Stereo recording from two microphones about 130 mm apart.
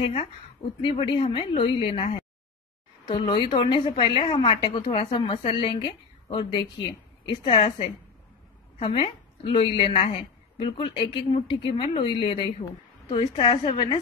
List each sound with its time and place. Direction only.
0.0 s a woman's voice: 45° left (ahead or behind)
3.1 s a woman's voice: 40° left (ahead or behind)